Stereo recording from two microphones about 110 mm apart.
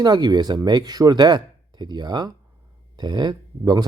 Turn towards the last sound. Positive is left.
turn(degrees=-40)  # may be behind; listen again after turning